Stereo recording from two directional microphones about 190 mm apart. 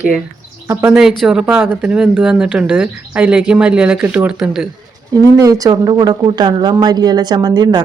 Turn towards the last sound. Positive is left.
turn(degrees=-20)  # may be behind; listen again after turning